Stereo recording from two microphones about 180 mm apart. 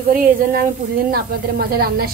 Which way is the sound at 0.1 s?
50° right (ahead or behind).